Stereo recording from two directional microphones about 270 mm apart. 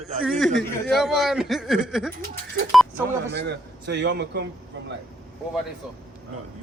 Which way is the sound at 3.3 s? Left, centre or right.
Right.